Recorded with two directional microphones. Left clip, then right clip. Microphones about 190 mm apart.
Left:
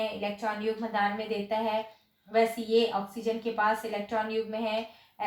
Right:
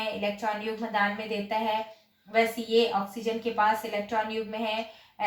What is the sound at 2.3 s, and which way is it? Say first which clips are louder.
A woman's voice: right 1 dB; 15° left (ahead or behind).